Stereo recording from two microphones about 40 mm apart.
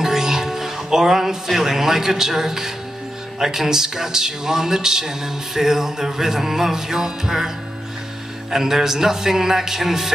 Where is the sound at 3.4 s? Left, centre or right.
Centre.